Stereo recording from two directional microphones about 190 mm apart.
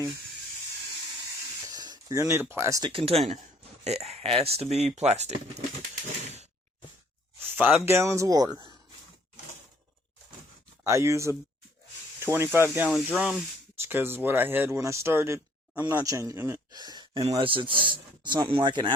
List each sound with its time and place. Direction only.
1.6 s a sound: 20° right (ahead or behind)
2.2 s speech: 10° right (ahead or behind)
2.9 s speech: 30° right (ahead or behind)
6.2 s a sound: 35° right (ahead or behind)
7.4 s speech: 10° right (ahead or behind)
10.8 s a man's voice: 15° right (ahead or behind)